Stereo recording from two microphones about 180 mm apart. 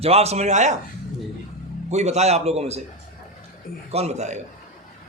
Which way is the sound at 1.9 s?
40° right (ahead or behind).